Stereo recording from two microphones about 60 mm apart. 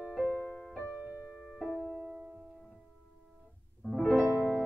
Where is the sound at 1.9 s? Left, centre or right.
Right.